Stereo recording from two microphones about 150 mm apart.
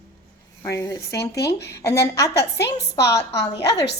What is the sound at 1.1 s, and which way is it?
Speech, 90° left.